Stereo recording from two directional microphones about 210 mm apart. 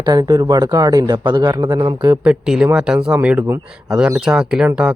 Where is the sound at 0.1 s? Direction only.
20° right (ahead or behind).